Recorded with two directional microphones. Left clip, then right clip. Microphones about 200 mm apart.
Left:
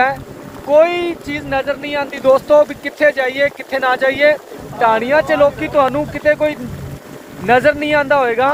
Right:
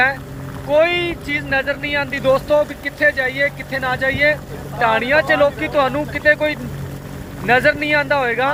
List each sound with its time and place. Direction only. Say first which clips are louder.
0.7 s speech: left 3 dB; 25° left (ahead or behind)
4.8 s speech: left 2 dB; 25° left (ahead or behind)